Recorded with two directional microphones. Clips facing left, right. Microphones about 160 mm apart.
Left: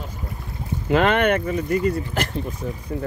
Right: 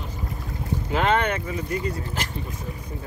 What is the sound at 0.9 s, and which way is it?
Speech, 65° left (ahead or behind).